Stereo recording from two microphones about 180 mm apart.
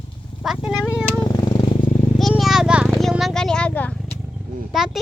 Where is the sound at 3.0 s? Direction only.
Centre (ahead or behind).